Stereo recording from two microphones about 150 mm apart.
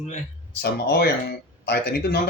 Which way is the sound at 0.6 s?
90° left.